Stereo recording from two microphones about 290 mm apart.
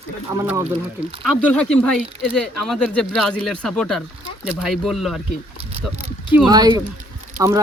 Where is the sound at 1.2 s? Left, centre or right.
Centre.